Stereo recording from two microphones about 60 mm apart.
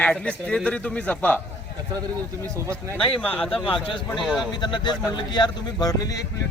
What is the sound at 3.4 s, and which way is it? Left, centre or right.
Speech, centre.